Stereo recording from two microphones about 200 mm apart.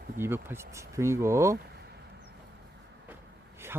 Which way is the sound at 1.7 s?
55° right (ahead or behind).